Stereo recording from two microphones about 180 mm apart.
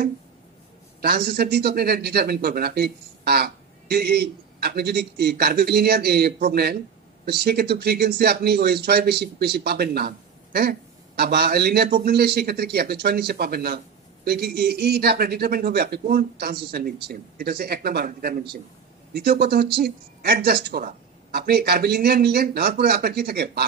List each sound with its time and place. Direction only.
1.0 s speech: 60° right (ahead or behind)